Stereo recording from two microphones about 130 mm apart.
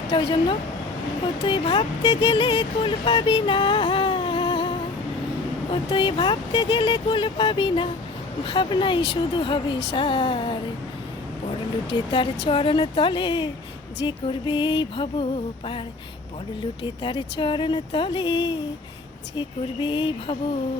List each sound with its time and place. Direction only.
0.1 s speech: 40° left (ahead or behind)
11.9 s speech: 40° left (ahead or behind)
16.8 s speech: 40° left (ahead or behind)